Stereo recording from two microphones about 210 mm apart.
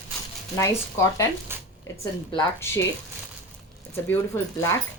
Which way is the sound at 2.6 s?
10° left (ahead or behind).